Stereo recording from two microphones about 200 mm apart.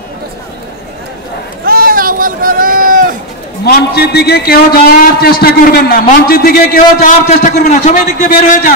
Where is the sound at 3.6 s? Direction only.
55° left (ahead or behind).